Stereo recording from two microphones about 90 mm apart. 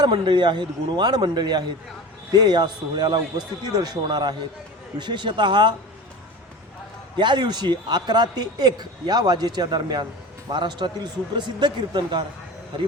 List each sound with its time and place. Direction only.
0.0 s a man's voice: 60° right (ahead or behind)
7.2 s a man's voice: 55° right (ahead or behind)